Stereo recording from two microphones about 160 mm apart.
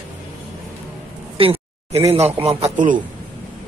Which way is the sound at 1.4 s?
35° right (ahead or behind).